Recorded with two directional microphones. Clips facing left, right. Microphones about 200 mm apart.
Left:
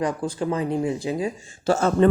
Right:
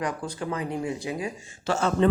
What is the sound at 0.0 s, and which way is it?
Speech, 25° left (ahead or behind).